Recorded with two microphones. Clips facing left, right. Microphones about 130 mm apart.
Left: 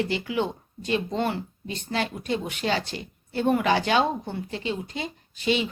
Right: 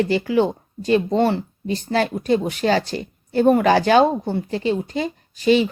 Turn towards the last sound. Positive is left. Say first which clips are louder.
# right 9 dB
turn(degrees=-40)  # may be behind; listen again after turning